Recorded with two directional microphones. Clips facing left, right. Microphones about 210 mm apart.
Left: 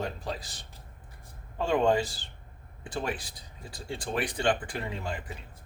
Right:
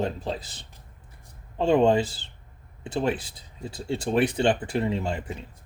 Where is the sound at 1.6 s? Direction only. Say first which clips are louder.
Right 5 dB; 25° right (ahead or behind).